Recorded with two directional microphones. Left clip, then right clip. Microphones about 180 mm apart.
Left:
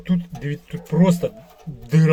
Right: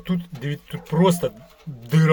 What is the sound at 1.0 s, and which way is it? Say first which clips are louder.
Speech: right 1 dB; 90° right.